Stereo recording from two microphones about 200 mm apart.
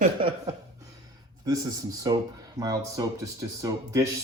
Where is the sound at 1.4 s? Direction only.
20° right (ahead or behind).